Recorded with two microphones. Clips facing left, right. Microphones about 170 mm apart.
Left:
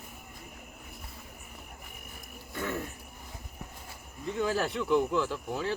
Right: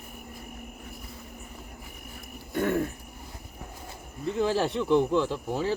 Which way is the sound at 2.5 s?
55° right (ahead or behind).